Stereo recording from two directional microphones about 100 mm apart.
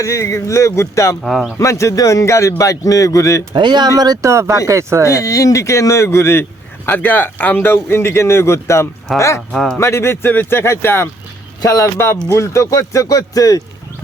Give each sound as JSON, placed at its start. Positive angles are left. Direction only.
{"t": 0.0, "sound": "a man's voice", "side_deg": 30}
{"t": 1.2, "sound": "speech", "side_deg": 0}
{"t": 1.5, "sound": "a man's voice", "side_deg": 30}
{"t": 3.5, "sound": "speech", "side_deg": -50}
{"t": 5.0, "sound": "a man's voice", "side_deg": 30}
{"t": 9.5, "sound": "speech", "side_deg": 5}
{"t": 9.7, "sound": "a man's voice", "side_deg": 25}